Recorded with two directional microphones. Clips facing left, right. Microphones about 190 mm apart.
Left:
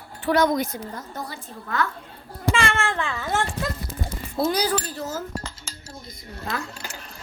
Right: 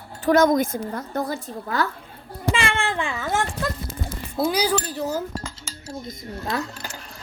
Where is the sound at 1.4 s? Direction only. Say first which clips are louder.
Right 2 dB; 35° right (ahead or behind).